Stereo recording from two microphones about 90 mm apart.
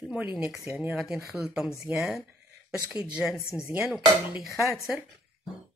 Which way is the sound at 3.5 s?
25° right (ahead or behind).